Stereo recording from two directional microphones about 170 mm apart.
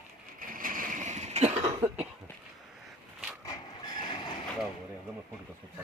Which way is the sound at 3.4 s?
25° left (ahead or behind).